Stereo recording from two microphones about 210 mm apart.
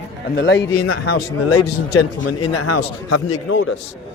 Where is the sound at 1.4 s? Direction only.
90° left.